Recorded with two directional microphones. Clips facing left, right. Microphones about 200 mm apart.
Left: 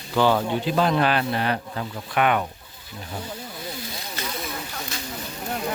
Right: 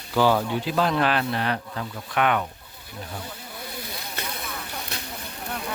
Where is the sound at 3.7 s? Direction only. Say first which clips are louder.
Left 1 dB; 60° right (ahead or behind).